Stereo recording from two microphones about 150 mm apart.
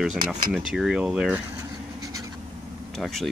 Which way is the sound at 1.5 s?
20° right (ahead or behind).